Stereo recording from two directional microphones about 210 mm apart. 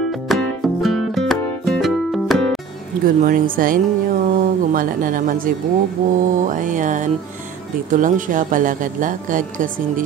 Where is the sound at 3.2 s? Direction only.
40° right (ahead or behind).